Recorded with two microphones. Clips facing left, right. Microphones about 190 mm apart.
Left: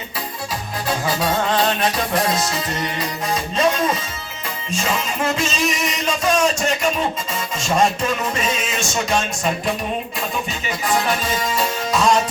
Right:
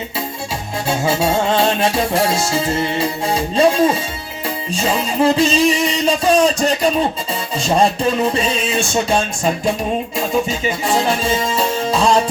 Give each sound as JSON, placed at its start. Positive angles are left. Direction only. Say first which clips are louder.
{"t": 0.9, "sound": "music", "louder": "right 4 dB", "side_deg": -25}